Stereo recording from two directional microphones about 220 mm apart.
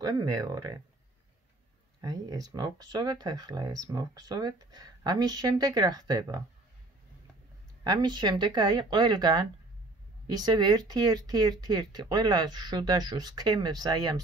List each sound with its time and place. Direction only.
0.0 s speech: 20° right (ahead or behind)
2.0 s speech: 15° right (ahead or behind)
7.8 s speech: 20° right (ahead or behind)